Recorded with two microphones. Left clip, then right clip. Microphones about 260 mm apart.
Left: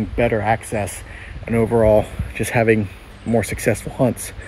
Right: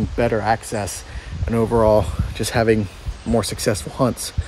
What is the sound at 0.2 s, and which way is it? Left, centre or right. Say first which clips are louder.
Speech: left 1 dB; centre.